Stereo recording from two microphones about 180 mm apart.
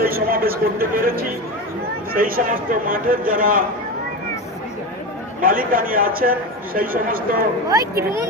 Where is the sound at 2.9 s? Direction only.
50° right (ahead or behind).